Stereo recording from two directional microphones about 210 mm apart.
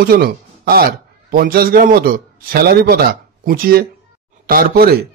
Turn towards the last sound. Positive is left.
turn(degrees=-45)  # may be behind; listen again after turning